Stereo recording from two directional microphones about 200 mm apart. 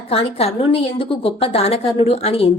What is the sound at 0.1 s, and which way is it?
A woman's voice, 30° left (ahead or behind).